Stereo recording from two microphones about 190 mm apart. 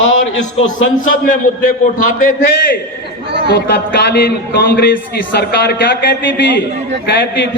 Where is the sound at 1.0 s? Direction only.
45° left (ahead or behind).